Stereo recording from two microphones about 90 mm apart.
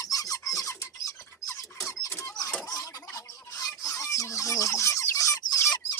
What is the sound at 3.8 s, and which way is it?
Chicken, 35° left (ahead or behind).